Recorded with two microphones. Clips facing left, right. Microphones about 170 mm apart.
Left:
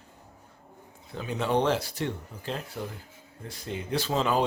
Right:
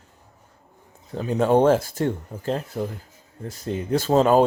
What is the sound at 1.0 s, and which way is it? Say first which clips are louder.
Speech: right 9 dB; 40° right (ahead or behind).